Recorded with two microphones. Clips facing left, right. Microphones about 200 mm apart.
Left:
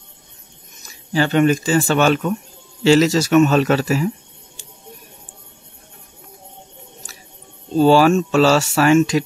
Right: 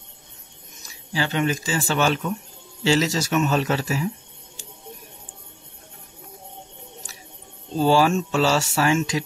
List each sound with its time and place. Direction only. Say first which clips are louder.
1.1 s speech: left 8 dB; 55° left (ahead or behind); by 4.1 s 75° left (ahead or behind)
7.7 s speech: left 6 dB; 75° left (ahead or behind)